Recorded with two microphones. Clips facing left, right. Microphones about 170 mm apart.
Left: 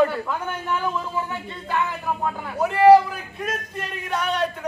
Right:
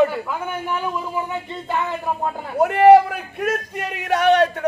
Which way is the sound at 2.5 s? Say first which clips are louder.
Right 2 dB; 60° right (ahead or behind).